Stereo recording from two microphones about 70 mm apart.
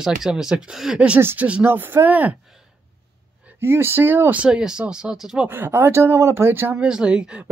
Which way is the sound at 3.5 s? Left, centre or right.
Right.